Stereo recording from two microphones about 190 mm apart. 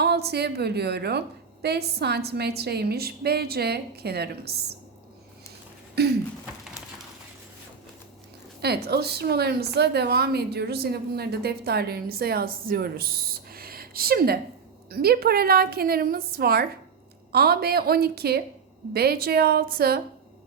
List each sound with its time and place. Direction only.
0.0 s a woman's voice: 60° right (ahead or behind)
6.0 s a woman's voice: 60° right (ahead or behind)
8.6 s a woman's voice: 60° right (ahead or behind)
13.5 s a sound: 50° right (ahead or behind)
14.8 s a woman's voice: 55° right (ahead or behind)